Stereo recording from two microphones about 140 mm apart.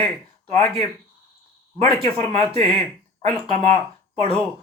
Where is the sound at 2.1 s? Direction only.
15° left (ahead or behind).